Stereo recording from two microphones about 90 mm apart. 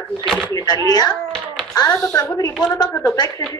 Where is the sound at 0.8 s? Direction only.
45° left (ahead or behind).